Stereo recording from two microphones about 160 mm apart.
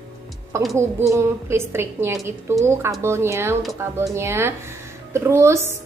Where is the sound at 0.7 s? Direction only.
15° right (ahead or behind).